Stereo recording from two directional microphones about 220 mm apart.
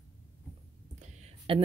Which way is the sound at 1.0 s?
25° right (ahead or behind).